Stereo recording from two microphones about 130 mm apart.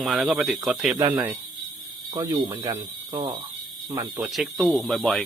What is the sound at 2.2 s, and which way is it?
Speech, 30° right (ahead or behind).